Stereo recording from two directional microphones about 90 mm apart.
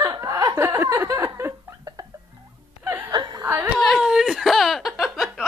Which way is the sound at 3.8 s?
5° right (ahead or behind).